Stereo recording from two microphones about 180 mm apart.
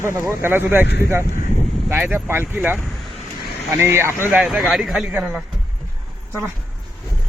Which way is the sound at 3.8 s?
15° right (ahead or behind).